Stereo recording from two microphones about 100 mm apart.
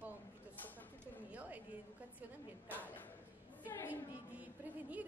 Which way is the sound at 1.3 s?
15° right (ahead or behind).